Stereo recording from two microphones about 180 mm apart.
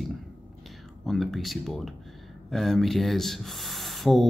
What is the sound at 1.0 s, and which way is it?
A man's voice, centre (ahead or behind).